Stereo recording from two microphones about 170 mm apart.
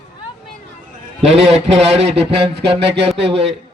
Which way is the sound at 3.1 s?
90° right.